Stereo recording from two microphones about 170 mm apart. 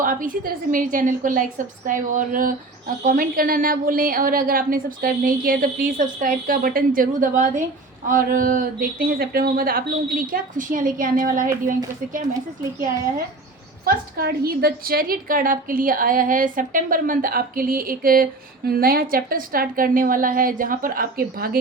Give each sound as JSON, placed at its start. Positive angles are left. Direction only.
{"t": 0.0, "sound": "a woman's voice", "side_deg": -55}
{"t": 13.8, "sound": "a woman's voice", "side_deg": -60}